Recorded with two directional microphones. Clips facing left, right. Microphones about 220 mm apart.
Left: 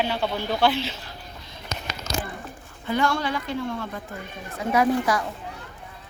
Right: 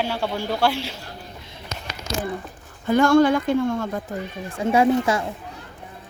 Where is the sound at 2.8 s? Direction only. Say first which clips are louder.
Right 9 dB; 45° right (ahead or behind).